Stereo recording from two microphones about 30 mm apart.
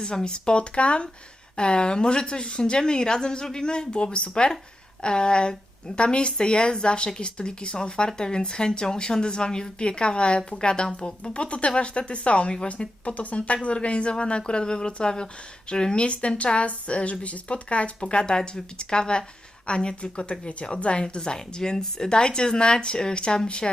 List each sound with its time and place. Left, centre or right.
0.0 s speech: left
11.2 s speech: left
16.0 s speech: left